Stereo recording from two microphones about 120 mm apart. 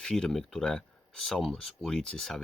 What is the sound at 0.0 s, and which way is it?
Speech, 5° left (ahead or behind).